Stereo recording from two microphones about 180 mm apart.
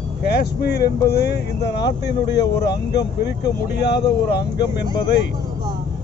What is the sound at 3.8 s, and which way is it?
Speech, 70° left (ahead or behind).